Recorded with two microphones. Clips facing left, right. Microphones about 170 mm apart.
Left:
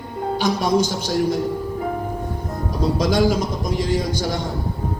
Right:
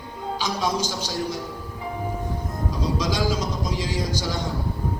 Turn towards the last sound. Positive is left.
turn(degrees=50)  # may be behind; listen again after turning